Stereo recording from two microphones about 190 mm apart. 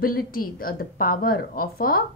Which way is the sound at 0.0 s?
50° left (ahead or behind).